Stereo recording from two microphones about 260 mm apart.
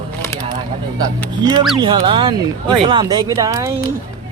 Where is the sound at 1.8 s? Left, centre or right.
Centre.